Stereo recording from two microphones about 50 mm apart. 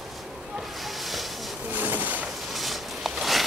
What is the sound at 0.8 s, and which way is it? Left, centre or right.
Hiss, centre.